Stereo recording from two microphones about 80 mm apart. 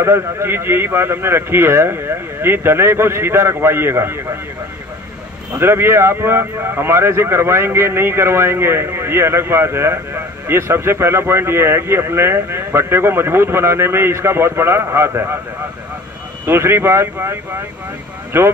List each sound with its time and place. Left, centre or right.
0.0 s speech: right
5.5 s speech: right
16.4 s speech: right